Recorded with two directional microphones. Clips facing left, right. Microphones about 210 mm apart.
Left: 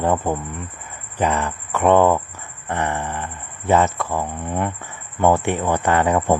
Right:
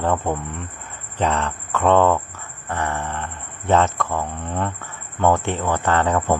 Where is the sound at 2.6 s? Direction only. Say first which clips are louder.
Left 2 dB; 20° left (ahead or behind).